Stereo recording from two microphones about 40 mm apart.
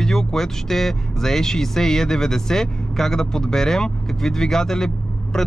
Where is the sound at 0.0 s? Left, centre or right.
Centre.